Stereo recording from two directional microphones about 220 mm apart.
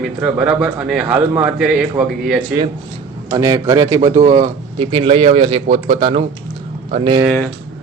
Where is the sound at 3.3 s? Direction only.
15° right (ahead or behind).